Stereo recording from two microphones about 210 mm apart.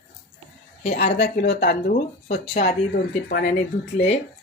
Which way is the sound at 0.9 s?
50° left (ahead or behind).